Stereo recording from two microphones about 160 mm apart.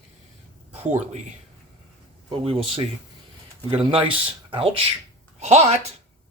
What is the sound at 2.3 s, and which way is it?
Speech, 35° right (ahead or behind).